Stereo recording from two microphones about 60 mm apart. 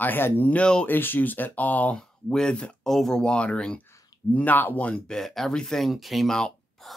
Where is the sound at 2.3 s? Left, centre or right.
Centre.